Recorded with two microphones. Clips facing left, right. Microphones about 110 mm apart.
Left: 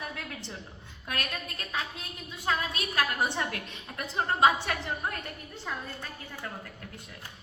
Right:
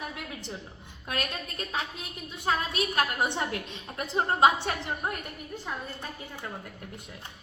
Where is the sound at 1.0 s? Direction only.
25° right (ahead or behind).